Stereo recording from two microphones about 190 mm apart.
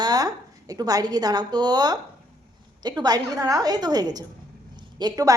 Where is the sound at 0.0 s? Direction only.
20° right (ahead or behind).